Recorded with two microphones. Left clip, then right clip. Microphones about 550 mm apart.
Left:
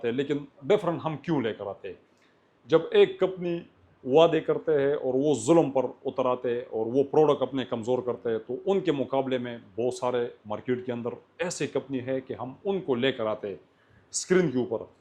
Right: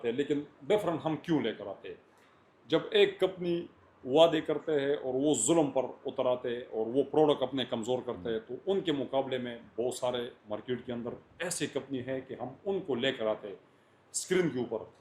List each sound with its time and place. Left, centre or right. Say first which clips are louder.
0.0 s speech: left 3 dB; left
12.6 s speech: left 5 dB; left
14.2 s speech: left 6 dB; left